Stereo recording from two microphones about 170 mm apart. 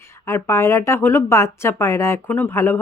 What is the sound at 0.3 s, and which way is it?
Speech, 15° left (ahead or behind).